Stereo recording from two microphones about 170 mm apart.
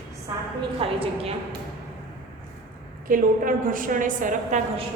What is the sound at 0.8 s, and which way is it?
Speech, 35° right (ahead or behind).